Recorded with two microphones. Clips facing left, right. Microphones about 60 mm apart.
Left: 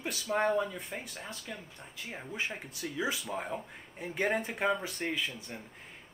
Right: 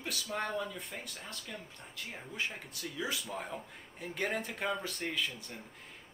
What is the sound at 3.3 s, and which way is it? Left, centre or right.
Speech, centre.